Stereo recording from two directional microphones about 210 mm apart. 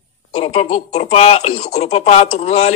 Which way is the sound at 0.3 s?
30° left (ahead or behind).